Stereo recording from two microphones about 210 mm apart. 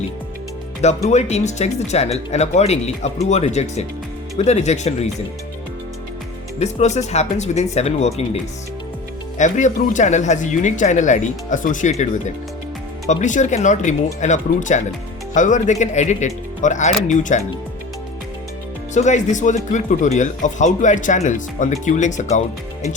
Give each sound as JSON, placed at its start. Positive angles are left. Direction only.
{"t": 1.0, "sound": "speech", "side_deg": 30}
{"t": 6.6, "sound": "speech", "side_deg": 30}
{"t": 9.4, "sound": "speech", "side_deg": 35}
{"t": 13.1, "sound": "speech", "side_deg": 35}
{"t": 18.9, "sound": "speech", "side_deg": 35}